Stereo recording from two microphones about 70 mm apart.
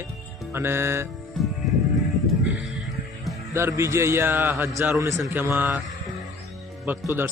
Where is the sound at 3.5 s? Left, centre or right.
Right.